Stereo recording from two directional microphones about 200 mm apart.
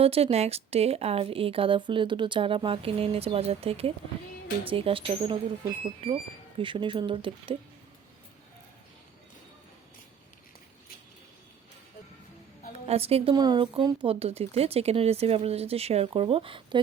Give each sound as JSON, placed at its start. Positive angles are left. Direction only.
{"t": 0.0, "sound": "speech", "side_deg": -30}
{"t": 12.9, "sound": "speech", "side_deg": -30}